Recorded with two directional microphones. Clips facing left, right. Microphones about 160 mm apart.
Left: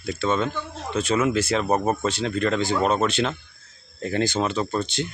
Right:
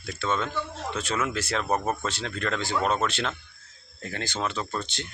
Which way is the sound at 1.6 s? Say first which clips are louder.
Left 5 dB; 15° left (ahead or behind).